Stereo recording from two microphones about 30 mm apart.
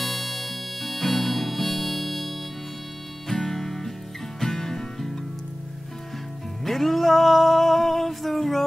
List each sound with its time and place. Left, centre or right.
0.0 s harmonica: centre
3.3 s music: centre
6.6 s music: centre